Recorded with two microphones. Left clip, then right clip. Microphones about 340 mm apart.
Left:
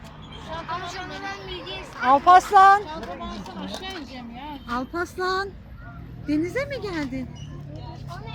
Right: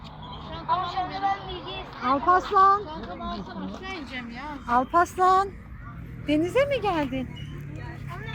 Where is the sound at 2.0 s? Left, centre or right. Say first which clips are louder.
Left 7 dB; left.